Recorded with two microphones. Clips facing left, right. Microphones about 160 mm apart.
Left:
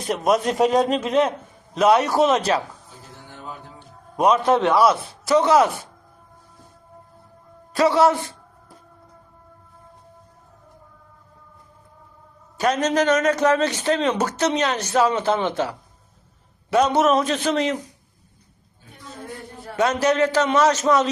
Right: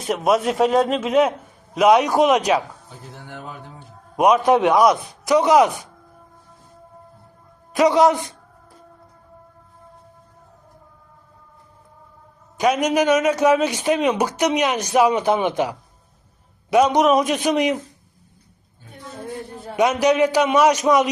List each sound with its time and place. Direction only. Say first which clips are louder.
0.0 s a man's voice: right 1 dB; 5° right (ahead or behind)
4.2 s a man's voice: right 2 dB; 15° right (ahead or behind)
7.7 s a man's voice: right 2 dB; 15° right (ahead or behind)
12.5 s a man's voice: right 2 dB; 10° right (ahead or behind)
19.6 s a man's voice: right 2 dB; 15° right (ahead or behind)